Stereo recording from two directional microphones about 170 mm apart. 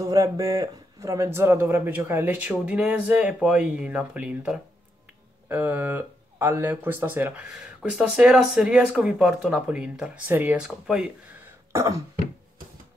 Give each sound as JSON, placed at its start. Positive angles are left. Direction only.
{"t": 0.0, "sound": "speech", "side_deg": -20}
{"t": 11.7, "sound": "cough", "side_deg": -15}